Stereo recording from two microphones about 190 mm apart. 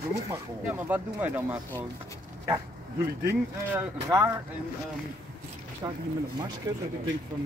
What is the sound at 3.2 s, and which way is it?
Speech, 10° right (ahead or behind).